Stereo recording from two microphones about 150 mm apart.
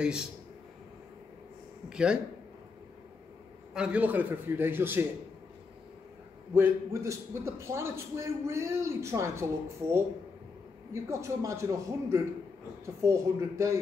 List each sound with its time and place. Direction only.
0.0 s speech: 5° right (ahead or behind)
1.9 s speech: 5° right (ahead or behind)
3.7 s a man's voice: 10° right (ahead or behind)
6.5 s a man's voice: 15° right (ahead or behind)